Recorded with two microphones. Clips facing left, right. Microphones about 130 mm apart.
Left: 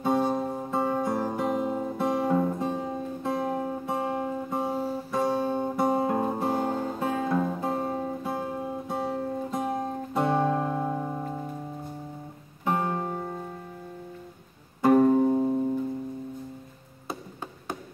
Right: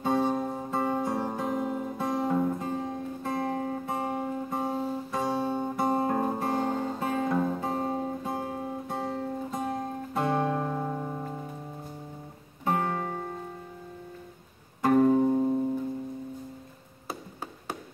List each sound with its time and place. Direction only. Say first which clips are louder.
0.0 s guitar: left 1 dB; 10° left (ahead or behind)
1.8 s music: left 3 dB; 20° left (ahead or behind)
2.3 s music: left 2 dB; 5° left (ahead or behind)
2.7 s guitar: left 1 dB; 10° left (ahead or behind)
5.4 s guitar: left 2 dB; 15° left (ahead or behind); by 8.2 s centre (ahead or behind)
8.2 s music: left 2 dB; 10° left (ahead or behind)
9.8 s music: left 3 dB; 25° left (ahead or behind)
10.4 s music: left 3 dB; 5° left (ahead or behind)
12.6 s music: left 1 dB; 10° left (ahead or behind)
14.8 s music: left 2 dB; 15° left (ahead or behind)